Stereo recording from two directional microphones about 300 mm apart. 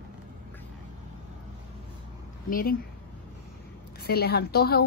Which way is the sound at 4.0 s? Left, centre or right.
Left.